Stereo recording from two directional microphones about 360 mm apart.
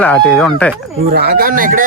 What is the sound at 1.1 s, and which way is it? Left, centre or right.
Speech, right.